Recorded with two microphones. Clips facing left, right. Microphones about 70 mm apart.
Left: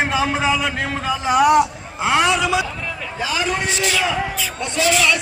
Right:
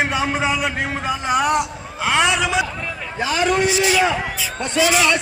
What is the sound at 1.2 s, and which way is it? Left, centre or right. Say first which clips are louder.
A man's voice: left 5 dB; centre.